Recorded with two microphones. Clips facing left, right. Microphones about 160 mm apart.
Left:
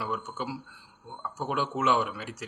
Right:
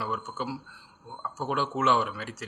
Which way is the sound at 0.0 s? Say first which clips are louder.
Even; 15° left (ahead or behind).